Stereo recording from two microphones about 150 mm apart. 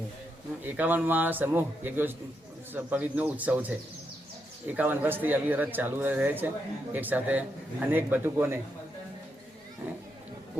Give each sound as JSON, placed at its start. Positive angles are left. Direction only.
{"t": 0.6, "sound": "a man's voice", "side_deg": -10}
{"t": 4.8, "sound": "a man's voice", "side_deg": -15}